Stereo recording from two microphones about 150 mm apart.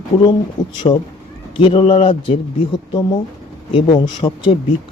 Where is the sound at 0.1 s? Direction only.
40° left (ahead or behind).